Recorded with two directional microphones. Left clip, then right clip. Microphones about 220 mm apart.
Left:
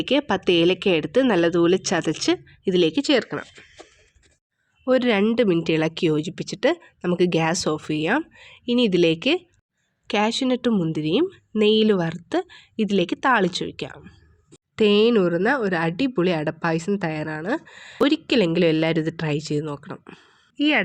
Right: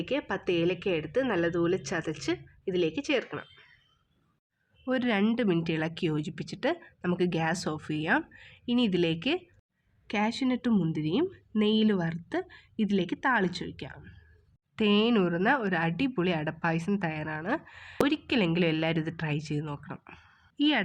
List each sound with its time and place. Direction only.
0.0 s a woman's voice: 35° left (ahead or behind)
4.9 s a woman's voice: 25° left (ahead or behind)